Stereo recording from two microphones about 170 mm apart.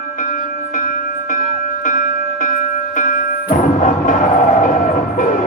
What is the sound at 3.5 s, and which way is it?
Music, 50° left (ahead or behind).